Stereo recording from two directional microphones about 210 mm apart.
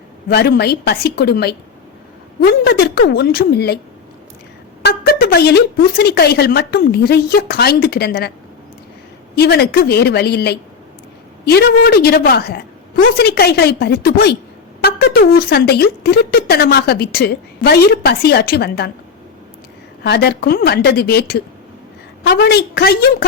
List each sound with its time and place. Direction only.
0.3 s a woman's voice: 45° left (ahead or behind)
4.8 s speech: 50° left (ahead or behind)
9.3 s speech: 50° left (ahead or behind)
20.1 s speech: 50° left (ahead or behind)